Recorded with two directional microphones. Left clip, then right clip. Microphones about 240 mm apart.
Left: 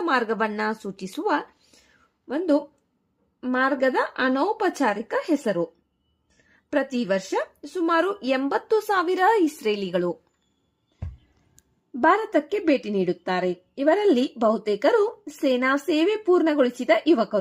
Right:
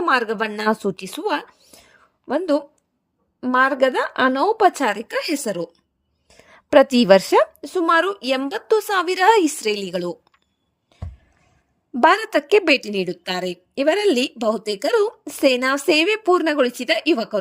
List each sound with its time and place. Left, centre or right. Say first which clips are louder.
0.0 s a woman's voice: right 4 dB; right
11.9 s a woman's voice: right 4 dB; right